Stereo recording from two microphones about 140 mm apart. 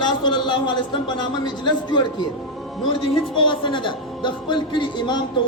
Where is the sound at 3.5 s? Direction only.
35° left (ahead or behind).